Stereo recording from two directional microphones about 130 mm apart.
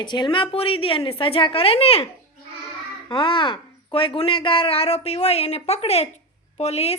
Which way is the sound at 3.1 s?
40° left (ahead or behind).